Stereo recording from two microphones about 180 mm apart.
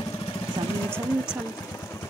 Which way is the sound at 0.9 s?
15° left (ahead or behind).